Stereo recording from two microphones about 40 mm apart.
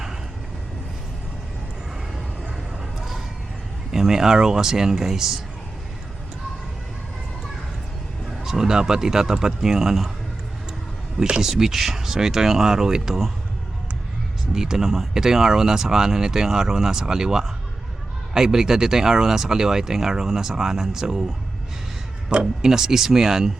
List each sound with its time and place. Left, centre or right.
3.9 s speech: centre
8.4 s speech: centre
11.4 s speech: centre
14.5 s speech: centre
22.3 s speech: right
22.6 s speech: centre